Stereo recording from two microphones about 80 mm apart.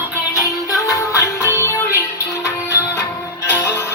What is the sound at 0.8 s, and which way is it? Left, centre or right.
Music, left.